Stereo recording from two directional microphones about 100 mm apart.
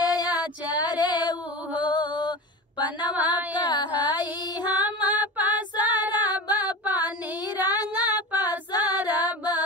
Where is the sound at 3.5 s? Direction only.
50° left (ahead or behind).